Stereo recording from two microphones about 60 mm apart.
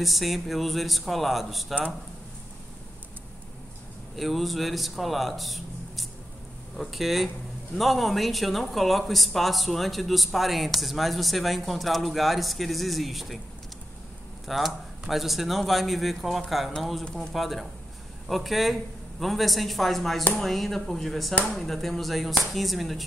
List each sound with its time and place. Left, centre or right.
0.0 s speech: centre
4.2 s speech: centre
14.5 s speech: centre